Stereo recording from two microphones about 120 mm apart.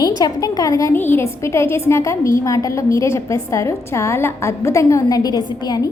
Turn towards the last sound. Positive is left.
turn(degrees=35)  # may be behind; listen again after turning